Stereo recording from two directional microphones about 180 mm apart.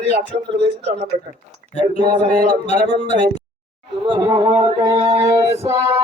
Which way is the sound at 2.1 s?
20° right (ahead or behind).